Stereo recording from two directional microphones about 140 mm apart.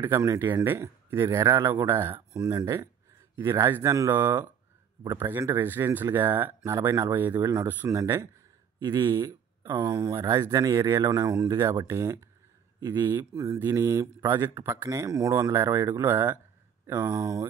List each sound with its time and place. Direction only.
0.0 s speech: 20° right (ahead or behind)